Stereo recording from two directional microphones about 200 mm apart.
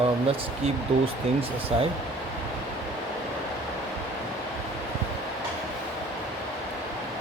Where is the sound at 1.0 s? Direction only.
30° right (ahead or behind).